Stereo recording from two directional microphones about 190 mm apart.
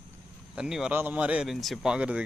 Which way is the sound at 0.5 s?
5° right (ahead or behind).